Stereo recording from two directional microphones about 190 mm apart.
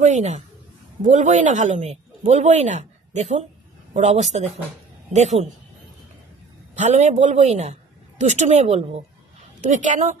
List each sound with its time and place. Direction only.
0.0 s speech: 35° right (ahead or behind)
6.8 s speech: 40° right (ahead or behind)